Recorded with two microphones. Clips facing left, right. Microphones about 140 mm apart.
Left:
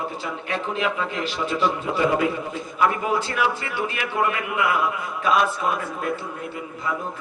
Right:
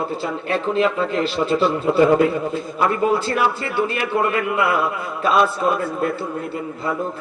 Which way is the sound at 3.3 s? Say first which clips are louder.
Right 4 dB; 35° right (ahead or behind).